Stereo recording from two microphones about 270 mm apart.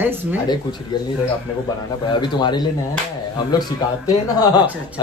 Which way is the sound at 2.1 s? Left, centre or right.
Centre.